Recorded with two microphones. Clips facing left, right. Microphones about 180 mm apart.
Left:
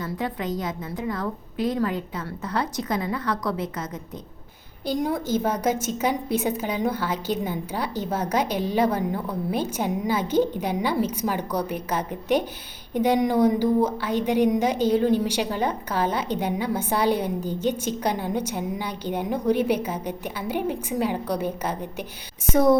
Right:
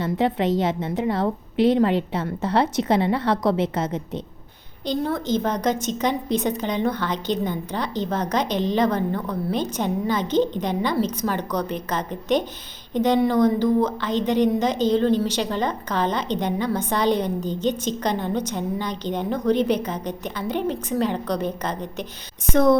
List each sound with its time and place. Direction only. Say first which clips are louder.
0.0 s a woman's voice: right 7 dB; 25° right (ahead or behind)
4.9 s a woman's voice: right 1 dB; 10° left (ahead or behind)